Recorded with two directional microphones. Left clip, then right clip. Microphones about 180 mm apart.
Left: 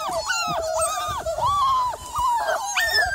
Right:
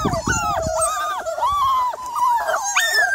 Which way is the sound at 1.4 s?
20° right (ahead or behind).